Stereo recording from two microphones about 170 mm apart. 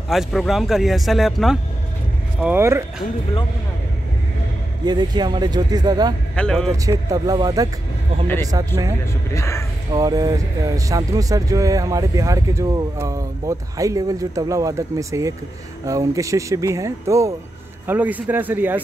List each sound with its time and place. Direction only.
0.1 s speech: centre (ahead or behind)
2.4 s speech: 15° right (ahead or behind)
4.8 s speech: 25° right (ahead or behind)
6.3 s speech: 5° left (ahead or behind)
6.9 s speech: 20° right (ahead or behind)
9.3 s speech: 15° left (ahead or behind)
9.9 s speech: 20° right (ahead or behind)